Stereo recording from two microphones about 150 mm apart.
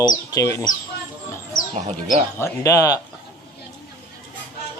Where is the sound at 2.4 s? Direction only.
20° left (ahead or behind).